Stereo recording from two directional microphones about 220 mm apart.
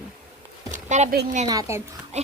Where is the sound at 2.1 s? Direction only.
30° right (ahead or behind).